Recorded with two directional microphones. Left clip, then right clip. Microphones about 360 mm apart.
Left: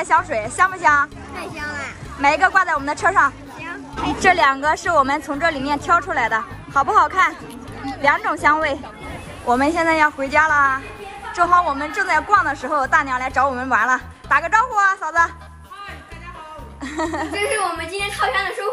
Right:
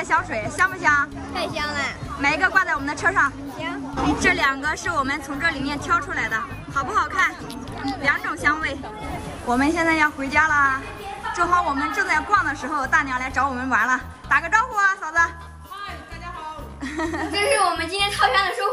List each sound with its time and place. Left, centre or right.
0.0 s a woman's voice: centre
2.2 s a woman's voice: centre
3.9 s a sound: centre
4.2 s a woman's voice: centre
16.8 s a woman's voice: centre